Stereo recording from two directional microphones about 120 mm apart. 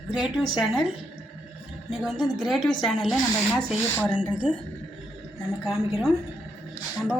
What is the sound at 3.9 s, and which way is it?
Speech, 10° left (ahead or behind).